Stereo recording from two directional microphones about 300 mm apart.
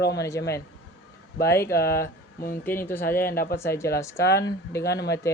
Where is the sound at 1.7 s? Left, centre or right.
Left.